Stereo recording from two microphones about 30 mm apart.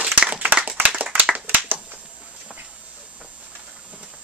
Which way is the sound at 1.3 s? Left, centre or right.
Right.